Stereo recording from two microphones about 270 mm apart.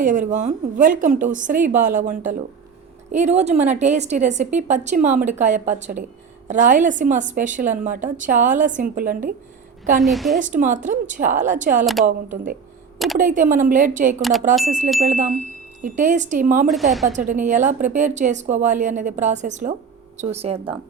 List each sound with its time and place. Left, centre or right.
0.0 s a woman's voice: right
10.0 s a woman's voice: centre
10.3 s a woman's voice: right
14.2 s a woman's voice: centre
14.6 s a woman's voice: right
16.6 s a woman's voice: centre
17.1 s a woman's voice: right